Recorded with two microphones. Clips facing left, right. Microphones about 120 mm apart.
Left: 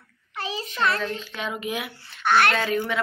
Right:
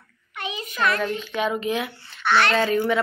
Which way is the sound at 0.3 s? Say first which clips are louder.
Left 1 dB; 35° left (ahead or behind).